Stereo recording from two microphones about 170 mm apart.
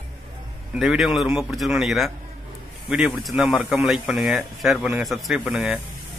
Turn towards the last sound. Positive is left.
turn(degrees=-5)  # may be behind; listen again after turning